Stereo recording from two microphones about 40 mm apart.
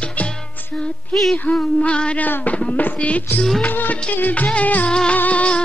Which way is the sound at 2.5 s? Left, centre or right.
Left.